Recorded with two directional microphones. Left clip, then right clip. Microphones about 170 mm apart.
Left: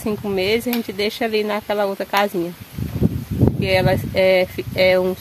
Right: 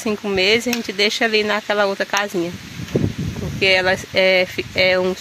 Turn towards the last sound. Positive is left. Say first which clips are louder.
# left 1 dB
turn(degrees=10)  # may be behind; listen again after turning